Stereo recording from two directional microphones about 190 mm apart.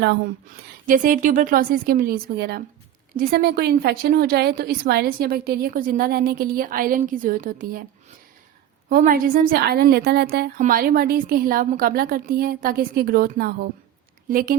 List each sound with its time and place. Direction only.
0.9 s a woman's voice: 45° right (ahead or behind)
8.9 s a woman's voice: 45° right (ahead or behind)
10.6 s a woman's voice: 45° right (ahead or behind)